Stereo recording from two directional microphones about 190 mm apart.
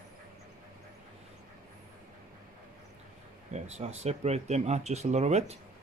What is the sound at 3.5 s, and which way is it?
Speech, 35° right (ahead or behind).